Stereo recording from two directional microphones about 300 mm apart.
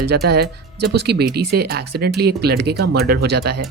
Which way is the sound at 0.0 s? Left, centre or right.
Right.